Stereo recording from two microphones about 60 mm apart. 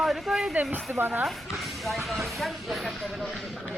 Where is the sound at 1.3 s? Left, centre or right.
Centre.